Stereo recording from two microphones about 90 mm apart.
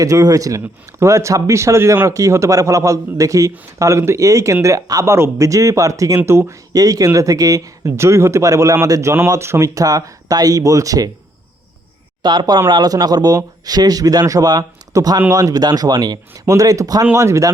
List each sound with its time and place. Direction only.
0.0 s speech: 40° right (ahead or behind)
6.1 s speech: 25° right (ahead or behind)
6.7 s speech: 40° right (ahead or behind)
12.2 s speech: 55° right (ahead or behind); by 17.5 s 35° right (ahead or behind)